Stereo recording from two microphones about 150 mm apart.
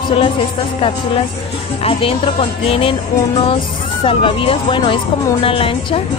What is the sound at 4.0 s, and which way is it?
Speech, 35° left (ahead or behind).